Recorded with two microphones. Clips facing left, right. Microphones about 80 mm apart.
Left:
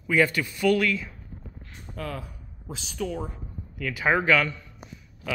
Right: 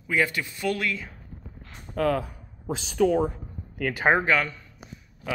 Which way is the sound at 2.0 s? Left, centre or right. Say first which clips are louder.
Right 10 dB; right.